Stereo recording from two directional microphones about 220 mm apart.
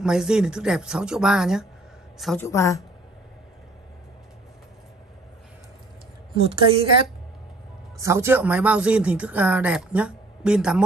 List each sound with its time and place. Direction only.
0.0 s a woman's voice: 5° right (ahead or behind)
2.4 s a woman's voice: 15° left (ahead or behind)
6.3 s a woman's voice: 25° right (ahead or behind)
8.0 s speech: 10° right (ahead or behind)